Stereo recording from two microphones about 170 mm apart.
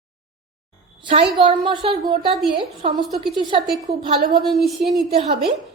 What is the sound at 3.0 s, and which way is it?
Speech, centre (ahead or behind).